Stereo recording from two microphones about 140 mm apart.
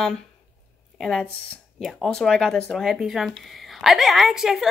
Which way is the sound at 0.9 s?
5° left (ahead or behind).